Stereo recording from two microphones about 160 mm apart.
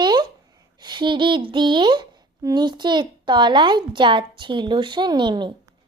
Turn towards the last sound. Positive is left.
turn(degrees=-30)  # may be behind; listen again after turning